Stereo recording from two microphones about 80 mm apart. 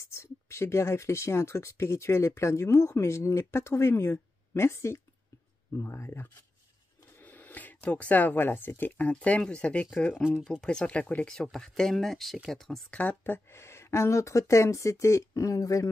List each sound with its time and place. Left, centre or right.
0.1 s speech: left
7.2 s speech: left
10.4 s speech: centre
11.5 s speech: centre
12.9 s speech: centre; by 15.9 s left